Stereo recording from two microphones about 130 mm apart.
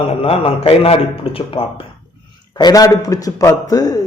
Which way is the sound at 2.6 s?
30° left (ahead or behind).